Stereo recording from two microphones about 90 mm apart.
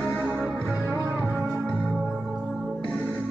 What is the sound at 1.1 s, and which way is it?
Music, 15° right (ahead or behind).